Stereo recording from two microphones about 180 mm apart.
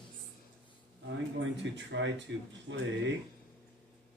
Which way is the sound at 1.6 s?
80° right.